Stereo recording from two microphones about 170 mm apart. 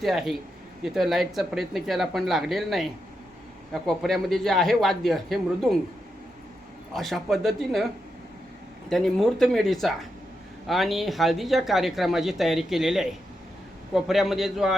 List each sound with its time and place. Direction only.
0.0 s speech: centre (ahead or behind)
6.9 s speech: centre (ahead or behind)
8.9 s speech: centre (ahead or behind)